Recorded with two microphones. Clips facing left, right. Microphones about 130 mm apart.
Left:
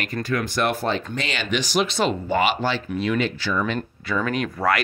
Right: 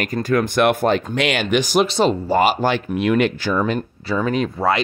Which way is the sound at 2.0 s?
35° right (ahead or behind).